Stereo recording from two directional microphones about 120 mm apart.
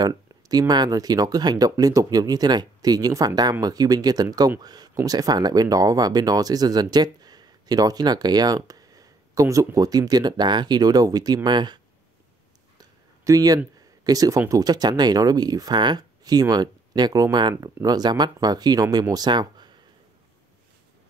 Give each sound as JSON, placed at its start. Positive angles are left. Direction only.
{"t": 0.0, "sound": "speech", "side_deg": -30}
{"t": 12.7, "sound": "a sound", "side_deg": -30}
{"t": 14.0, "sound": "speech", "side_deg": -30}